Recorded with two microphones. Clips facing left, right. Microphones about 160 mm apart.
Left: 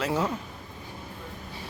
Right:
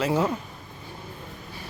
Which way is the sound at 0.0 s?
Centre (ahead or behind).